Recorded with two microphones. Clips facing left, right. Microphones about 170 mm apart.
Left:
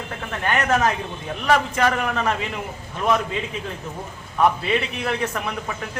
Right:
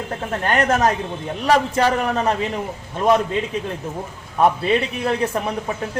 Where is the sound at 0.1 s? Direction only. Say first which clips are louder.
Right 2 dB; 35° right (ahead or behind).